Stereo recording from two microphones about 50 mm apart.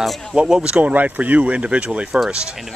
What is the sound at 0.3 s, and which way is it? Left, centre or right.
Speech, centre.